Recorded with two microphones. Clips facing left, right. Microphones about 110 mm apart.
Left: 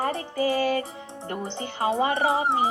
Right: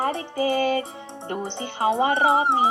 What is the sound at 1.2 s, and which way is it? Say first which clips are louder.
Speech: right 2 dB; 25° right (ahead or behind).